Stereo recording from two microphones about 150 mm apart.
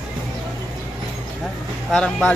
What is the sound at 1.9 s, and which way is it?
Speech, 5° left (ahead or behind).